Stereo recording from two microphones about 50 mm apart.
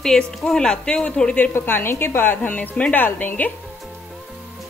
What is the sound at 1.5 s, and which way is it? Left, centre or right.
Speech, left.